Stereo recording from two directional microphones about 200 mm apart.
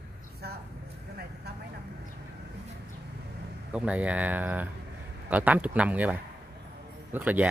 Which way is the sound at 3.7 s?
5° right (ahead or behind).